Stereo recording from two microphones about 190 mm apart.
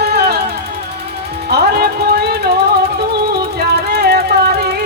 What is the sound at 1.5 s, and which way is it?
Music, 60° right (ahead or behind).